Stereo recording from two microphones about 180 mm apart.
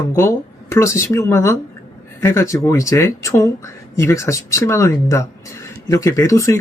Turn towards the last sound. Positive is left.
turn(degrees=15)  # may be behind; listen again after turning